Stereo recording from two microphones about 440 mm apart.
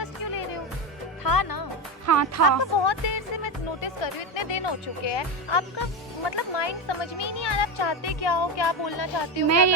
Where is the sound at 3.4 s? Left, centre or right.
Left.